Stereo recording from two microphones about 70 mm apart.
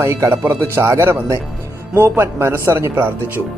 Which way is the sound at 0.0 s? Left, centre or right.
Right.